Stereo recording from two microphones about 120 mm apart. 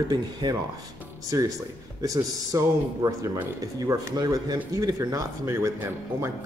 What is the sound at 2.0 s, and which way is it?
Speech, 30° right (ahead or behind).